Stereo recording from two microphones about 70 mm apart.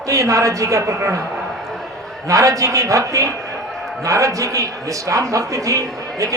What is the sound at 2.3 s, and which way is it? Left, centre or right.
A man's voice, right.